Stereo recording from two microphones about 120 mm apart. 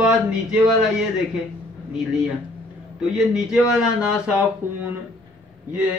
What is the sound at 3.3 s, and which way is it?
Speech, 5° right (ahead or behind).